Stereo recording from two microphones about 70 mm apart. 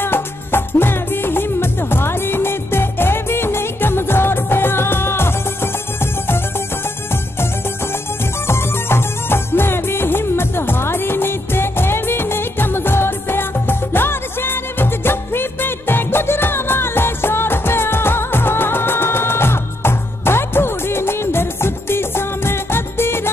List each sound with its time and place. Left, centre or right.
0.0 s music: left
8.5 s music: left